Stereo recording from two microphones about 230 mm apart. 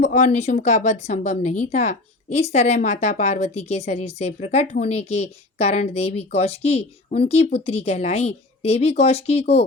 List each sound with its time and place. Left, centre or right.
0.0 s speech: left